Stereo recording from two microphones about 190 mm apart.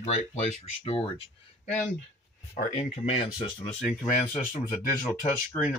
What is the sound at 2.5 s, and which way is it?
Speech, 35° left (ahead or behind).